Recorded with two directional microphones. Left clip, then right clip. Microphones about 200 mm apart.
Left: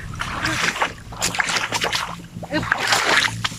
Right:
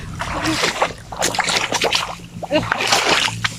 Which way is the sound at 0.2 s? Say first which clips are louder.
Right 3 dB; 30° right (ahead or behind).